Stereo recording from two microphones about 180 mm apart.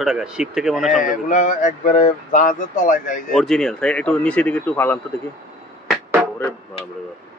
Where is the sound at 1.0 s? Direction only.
45° left (ahead or behind).